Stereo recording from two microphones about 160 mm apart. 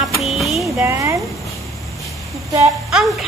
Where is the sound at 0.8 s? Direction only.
20° right (ahead or behind).